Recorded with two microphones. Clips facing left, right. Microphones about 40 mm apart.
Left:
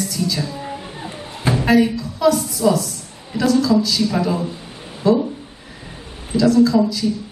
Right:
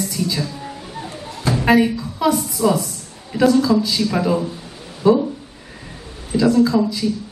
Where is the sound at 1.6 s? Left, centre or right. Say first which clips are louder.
Right 1 dB; centre.